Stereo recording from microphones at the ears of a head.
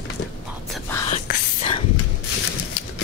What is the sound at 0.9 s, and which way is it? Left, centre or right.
Whispering, left.